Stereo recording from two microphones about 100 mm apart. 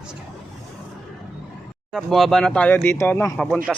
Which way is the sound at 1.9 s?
Centre (ahead or behind).